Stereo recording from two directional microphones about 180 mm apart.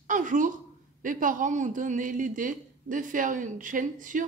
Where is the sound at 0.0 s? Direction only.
45° right (ahead or behind).